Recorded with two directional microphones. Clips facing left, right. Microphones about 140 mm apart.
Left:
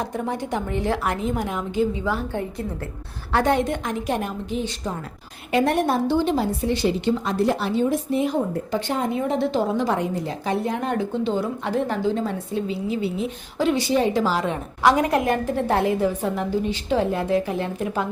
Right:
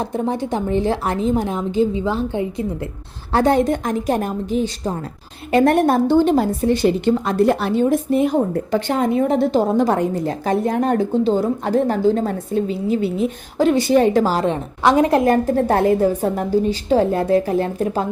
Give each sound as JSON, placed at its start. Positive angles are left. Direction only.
{"t": 0.0, "sound": "a woman's voice", "side_deg": -30}
{"t": 3.3, "sound": "a woman's voice", "side_deg": -35}
{"t": 9.2, "sound": "a woman's voice", "side_deg": -45}